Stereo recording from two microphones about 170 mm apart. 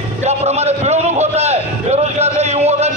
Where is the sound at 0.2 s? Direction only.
40° right (ahead or behind).